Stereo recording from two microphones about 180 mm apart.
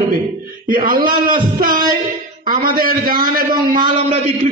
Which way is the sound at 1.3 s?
50° right (ahead or behind).